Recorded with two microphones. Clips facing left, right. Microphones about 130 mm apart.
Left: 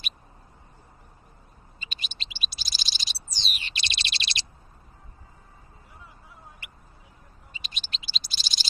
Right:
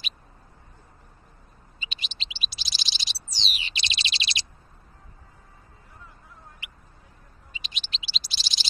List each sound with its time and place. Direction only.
1.8 s bird: 45° left (ahead or behind)
7.5 s bird: 45° left (ahead or behind)